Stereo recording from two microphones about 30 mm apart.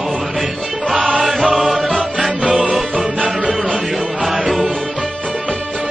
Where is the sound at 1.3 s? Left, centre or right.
Right.